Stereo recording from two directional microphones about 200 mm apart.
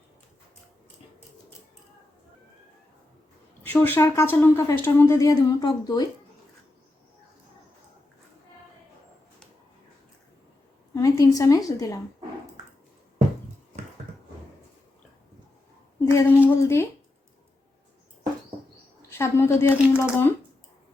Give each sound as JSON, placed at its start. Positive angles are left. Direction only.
{"t": 3.6, "sound": "speech", "side_deg": 10}
{"t": 10.9, "sound": "a woman's voice", "side_deg": 15}
{"t": 16.0, "sound": "a woman's voice", "side_deg": 10}
{"t": 19.1, "sound": "speech", "side_deg": 15}
{"t": 19.7, "sound": "speech", "side_deg": -5}
{"t": 20.0, "sound": "speech", "side_deg": 10}